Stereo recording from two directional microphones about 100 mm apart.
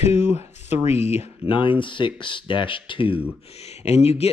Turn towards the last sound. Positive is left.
turn(degrees=90)